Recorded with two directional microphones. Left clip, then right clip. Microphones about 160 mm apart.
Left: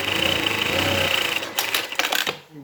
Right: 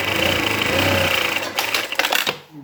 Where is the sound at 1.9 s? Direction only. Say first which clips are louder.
Right 3 dB; 5° left (ahead or behind).